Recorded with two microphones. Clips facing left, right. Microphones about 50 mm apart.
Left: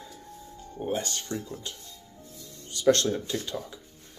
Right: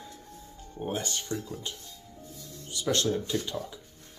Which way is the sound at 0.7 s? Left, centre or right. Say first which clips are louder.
Left 2 dB; centre.